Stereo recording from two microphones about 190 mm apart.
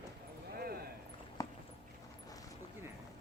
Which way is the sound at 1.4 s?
20° left (ahead or behind).